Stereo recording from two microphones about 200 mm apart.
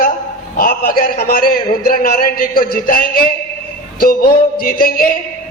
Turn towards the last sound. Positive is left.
turn(degrees=45)  # may be behind; listen again after turning